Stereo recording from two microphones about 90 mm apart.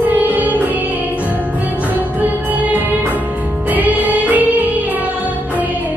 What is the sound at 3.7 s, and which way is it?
Music, 20° right (ahead or behind).